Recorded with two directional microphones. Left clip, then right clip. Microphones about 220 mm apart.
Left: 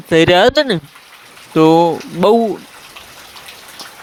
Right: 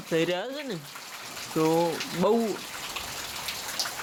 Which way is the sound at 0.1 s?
45° left (ahead or behind).